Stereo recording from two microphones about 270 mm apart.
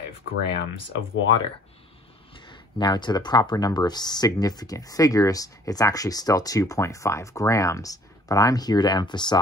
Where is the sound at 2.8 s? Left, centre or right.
Centre.